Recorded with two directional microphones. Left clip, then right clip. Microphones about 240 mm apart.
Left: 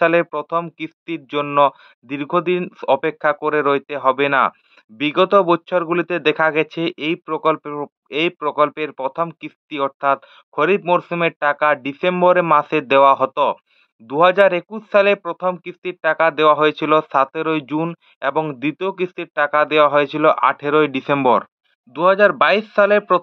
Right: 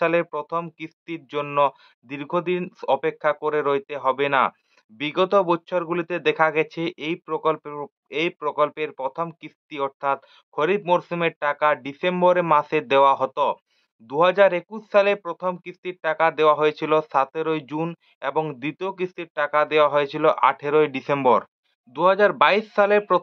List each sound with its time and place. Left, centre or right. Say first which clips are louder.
0.0 s speech: left 6 dB; left